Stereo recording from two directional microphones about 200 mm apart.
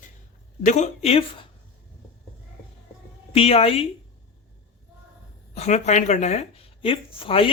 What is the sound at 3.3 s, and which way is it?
Speech, 30° left (ahead or behind).